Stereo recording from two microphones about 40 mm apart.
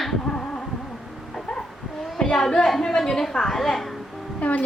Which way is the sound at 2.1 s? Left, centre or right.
Centre.